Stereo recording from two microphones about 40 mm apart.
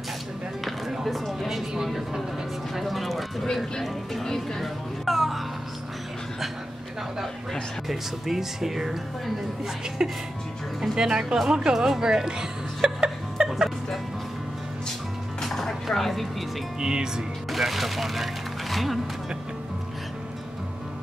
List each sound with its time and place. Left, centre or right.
0.7 s a sound: centre
1.9 s a woman's voice: centre
2.7 s music: centre
3.8 s speech: centre
7.9 s speech: centre
10.0 s speech: centre
11.7 s music: centre
15.4 s chopping: centre
16.8 s speech: centre
17.5 s speech: centre